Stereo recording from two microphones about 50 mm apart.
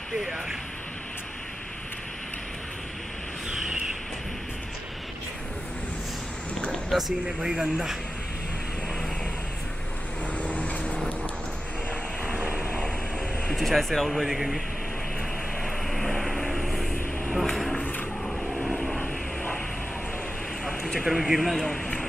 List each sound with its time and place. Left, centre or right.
0.1 s speech: centre
6.9 s speech: centre
10.3 s vehicle: left
12.3 s vehicle: right
13.5 s speech: centre
15.6 s vehicle: centre
17.3 s a sound: centre
18.5 s vehicle: centre
20.6 s a man's voice: centre